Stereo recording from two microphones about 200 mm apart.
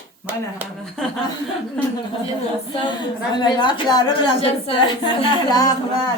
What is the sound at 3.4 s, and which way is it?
A woman's voice, 20° left (ahead or behind).